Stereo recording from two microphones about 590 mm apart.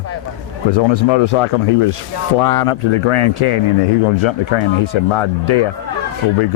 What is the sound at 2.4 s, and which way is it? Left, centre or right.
Speech, left.